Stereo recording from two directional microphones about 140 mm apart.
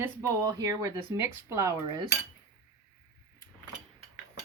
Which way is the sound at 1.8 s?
30° right (ahead or behind).